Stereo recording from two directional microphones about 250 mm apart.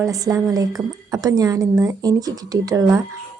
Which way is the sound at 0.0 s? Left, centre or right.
Centre.